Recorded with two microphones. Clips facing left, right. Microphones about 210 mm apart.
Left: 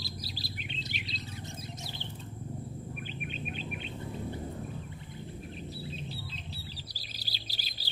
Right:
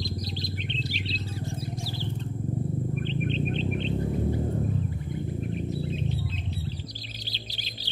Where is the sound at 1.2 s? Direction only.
20° left (ahead or behind).